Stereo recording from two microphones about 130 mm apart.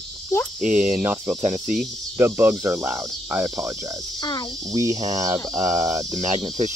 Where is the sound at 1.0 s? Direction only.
15° right (ahead or behind).